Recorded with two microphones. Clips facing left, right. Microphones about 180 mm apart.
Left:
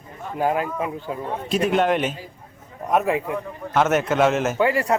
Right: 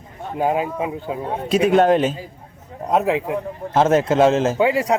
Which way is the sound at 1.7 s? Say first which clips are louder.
Right 6 dB; 40° right (ahead or behind).